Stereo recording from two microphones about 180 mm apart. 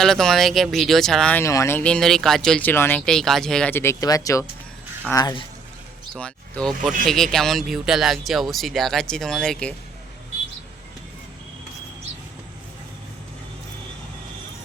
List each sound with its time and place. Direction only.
0.0 s speech: centre (ahead or behind); by 5.4 s 20° left (ahead or behind)
6.1 s speech: 5° left (ahead or behind)